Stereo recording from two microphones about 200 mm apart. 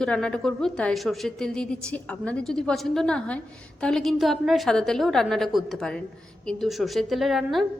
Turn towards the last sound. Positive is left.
turn(degrees=0)  # may be behind; listen again after turning